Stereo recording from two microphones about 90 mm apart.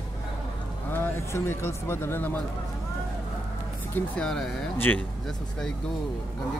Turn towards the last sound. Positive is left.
turn(degrees=20)  # may be behind; listen again after turning